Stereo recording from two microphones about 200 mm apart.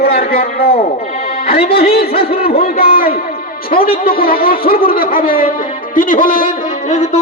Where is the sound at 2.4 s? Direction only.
50° left (ahead or behind).